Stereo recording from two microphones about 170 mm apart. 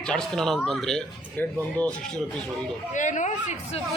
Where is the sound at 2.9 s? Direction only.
45° left (ahead or behind).